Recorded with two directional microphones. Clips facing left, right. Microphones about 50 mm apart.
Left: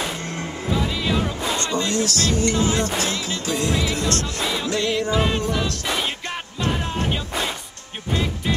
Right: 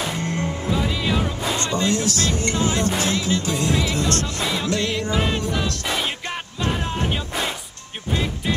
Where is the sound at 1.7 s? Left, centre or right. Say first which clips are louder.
Right 1 dB; right.